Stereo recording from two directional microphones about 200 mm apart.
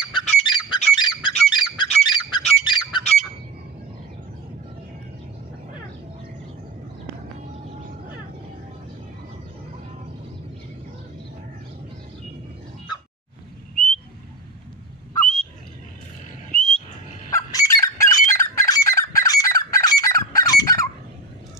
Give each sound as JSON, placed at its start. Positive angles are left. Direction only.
{"t": 0.2, "sound": "squawk", "side_deg": 35}
{"t": 0.7, "sound": "goose", "side_deg": 35}
{"t": 0.9, "sound": "bird", "side_deg": 20}
{"t": 1.5, "sound": "squawk", "side_deg": 20}
{"t": 16.5, "sound": "wild animals", "side_deg": 5}
{"t": 17.3, "sound": "fowl", "side_deg": 15}
{"t": 18.6, "sound": "goose", "side_deg": 15}